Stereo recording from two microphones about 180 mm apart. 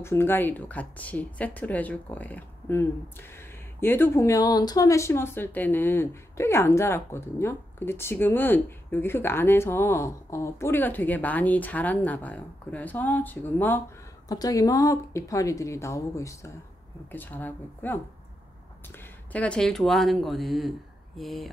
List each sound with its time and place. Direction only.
0.0 s speech: 15° left (ahead or behind)
19.3 s speech: 5° left (ahead or behind)